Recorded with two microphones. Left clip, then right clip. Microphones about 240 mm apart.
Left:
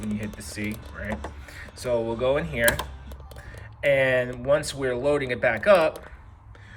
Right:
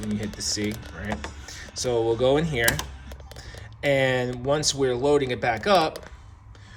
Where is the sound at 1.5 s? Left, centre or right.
Centre.